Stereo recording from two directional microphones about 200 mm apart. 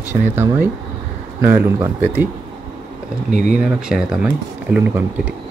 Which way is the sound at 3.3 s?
40° right (ahead or behind).